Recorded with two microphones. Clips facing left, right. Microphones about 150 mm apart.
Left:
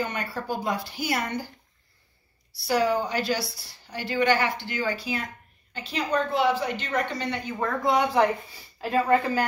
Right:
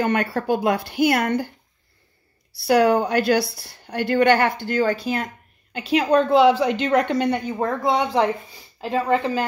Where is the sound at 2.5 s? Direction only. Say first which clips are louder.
Right 7 dB; 60° right (ahead or behind).